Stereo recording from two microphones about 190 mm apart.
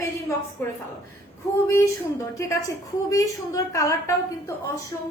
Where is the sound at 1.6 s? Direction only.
15° left (ahead or behind).